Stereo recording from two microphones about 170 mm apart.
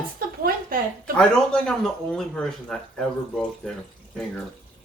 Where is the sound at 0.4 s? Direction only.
55° right (ahead or behind).